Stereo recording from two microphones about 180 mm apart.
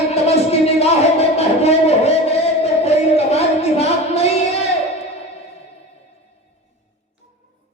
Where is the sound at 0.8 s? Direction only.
35° left (ahead or behind).